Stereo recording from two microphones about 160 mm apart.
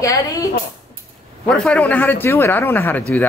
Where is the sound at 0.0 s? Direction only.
20° left (ahead or behind).